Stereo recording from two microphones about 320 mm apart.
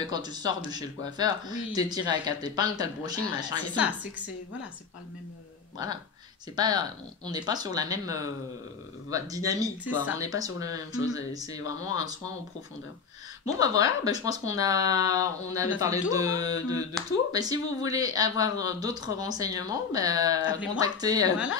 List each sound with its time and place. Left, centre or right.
0.2 s speech: centre
6.5 s speech: centre
11.0 s speech: left
11.3 s speech: centre
11.8 s speech: left
13.6 s speech: centre
20.4 s speech: left
20.7 s speech: centre